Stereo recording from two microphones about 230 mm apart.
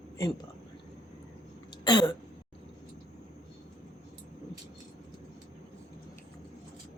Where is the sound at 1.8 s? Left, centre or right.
Centre.